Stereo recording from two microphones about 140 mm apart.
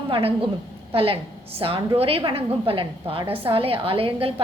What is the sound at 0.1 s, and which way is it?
A woman's voice, 40° right (ahead or behind).